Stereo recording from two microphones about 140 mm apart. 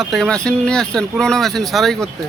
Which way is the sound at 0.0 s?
Centre (ahead or behind).